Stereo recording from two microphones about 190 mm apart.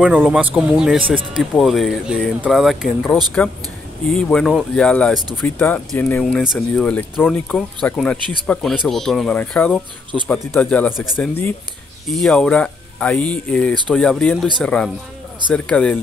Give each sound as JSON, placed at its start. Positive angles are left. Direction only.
{"t": 0.0, "sound": "speech", "side_deg": -5}
{"t": 4.1, "sound": "speech", "side_deg": 5}